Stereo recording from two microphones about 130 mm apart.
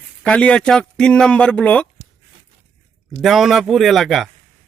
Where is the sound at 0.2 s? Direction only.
10° left (ahead or behind).